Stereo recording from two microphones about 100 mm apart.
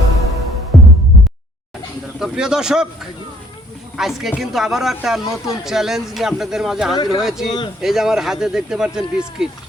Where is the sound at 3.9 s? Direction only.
5° right (ahead or behind).